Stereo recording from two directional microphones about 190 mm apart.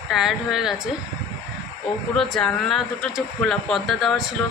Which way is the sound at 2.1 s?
Centre (ahead or behind).